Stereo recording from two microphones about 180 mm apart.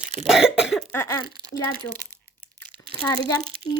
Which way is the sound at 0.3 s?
5° right (ahead or behind).